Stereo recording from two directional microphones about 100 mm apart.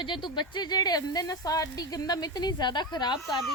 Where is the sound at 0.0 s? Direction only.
55° left (ahead or behind).